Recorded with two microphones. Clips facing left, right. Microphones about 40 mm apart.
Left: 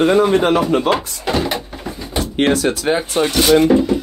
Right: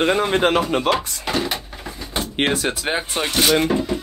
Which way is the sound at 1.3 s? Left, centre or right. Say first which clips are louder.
Left 5 dB; centre.